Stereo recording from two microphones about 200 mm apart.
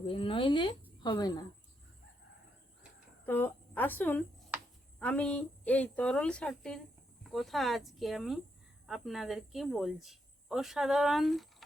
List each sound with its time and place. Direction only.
0.0 s speech: 25° left (ahead or behind)
3.2 s a woman's voice: 10° left (ahead or behind)